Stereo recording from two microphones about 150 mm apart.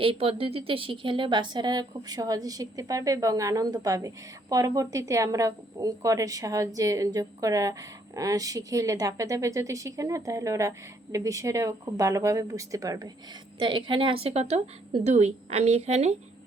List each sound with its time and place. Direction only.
0.0 s a woman's voice: 40° right (ahead or behind)